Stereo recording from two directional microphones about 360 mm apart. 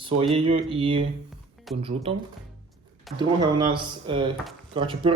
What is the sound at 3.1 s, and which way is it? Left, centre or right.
Speech, centre.